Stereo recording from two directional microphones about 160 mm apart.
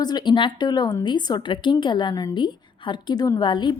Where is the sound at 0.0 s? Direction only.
25° left (ahead or behind).